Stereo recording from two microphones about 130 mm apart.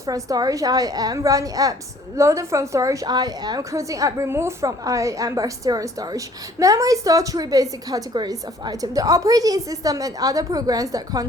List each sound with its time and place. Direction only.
0.0 s a woman's voice: 25° right (ahead or behind)